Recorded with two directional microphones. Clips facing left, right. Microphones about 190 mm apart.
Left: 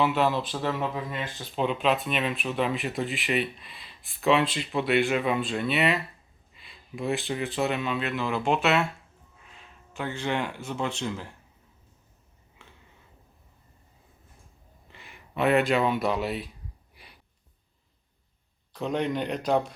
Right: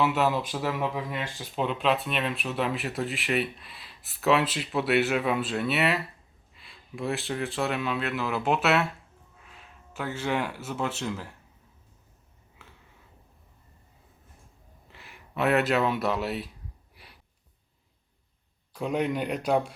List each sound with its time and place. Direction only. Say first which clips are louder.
0.0 s speech: left 1 dB; 5° right (ahead or behind)
1.5 s speech: left 1 dB; centre (ahead or behind)
12.6 s a sound: even; 5° right (ahead or behind)
14.9 s speech: left 1 dB; centre (ahead or behind)
16.9 s a sound: even; centre (ahead or behind)
18.7 s speech: even; 10° right (ahead or behind)